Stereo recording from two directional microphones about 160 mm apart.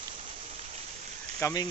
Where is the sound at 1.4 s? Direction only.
25° left (ahead or behind).